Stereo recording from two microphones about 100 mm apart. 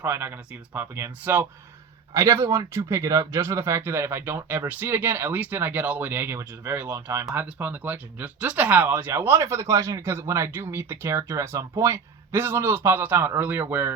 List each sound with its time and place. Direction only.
0.0 s speech: 20° right (ahead or behind)
2.1 s speech: 30° right (ahead or behind)